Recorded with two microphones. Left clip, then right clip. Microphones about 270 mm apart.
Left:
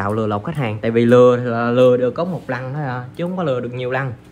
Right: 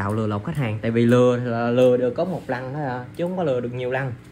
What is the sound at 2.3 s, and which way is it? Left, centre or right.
Speech, left.